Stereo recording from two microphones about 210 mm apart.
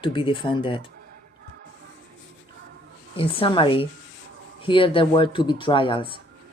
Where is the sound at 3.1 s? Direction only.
25° left (ahead or behind).